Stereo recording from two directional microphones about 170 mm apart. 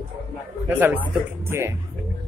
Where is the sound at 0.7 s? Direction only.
10° right (ahead or behind).